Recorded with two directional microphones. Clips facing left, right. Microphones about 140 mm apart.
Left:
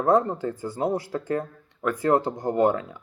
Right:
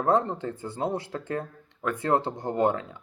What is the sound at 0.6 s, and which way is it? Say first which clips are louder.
Speech: left 4 dB; 25° right (ahead or behind).